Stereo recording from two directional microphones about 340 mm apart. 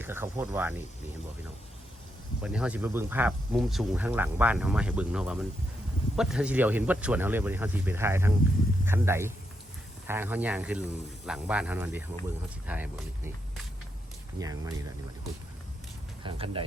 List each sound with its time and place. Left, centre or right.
0.0 s speech: centre
2.4 s speech: centre
14.3 s speech: centre
16.2 s speech: centre